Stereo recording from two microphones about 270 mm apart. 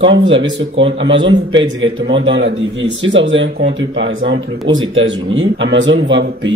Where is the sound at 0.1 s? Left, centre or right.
Right.